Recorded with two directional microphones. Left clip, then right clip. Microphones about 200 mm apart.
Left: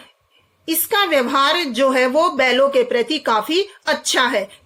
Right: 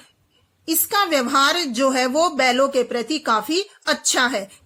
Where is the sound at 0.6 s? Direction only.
20° right (ahead or behind).